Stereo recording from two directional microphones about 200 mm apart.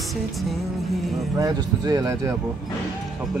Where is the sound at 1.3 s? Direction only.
15° right (ahead or behind).